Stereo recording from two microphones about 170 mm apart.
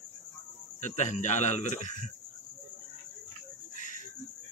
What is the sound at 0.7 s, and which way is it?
Cricket, 45° left (ahead or behind).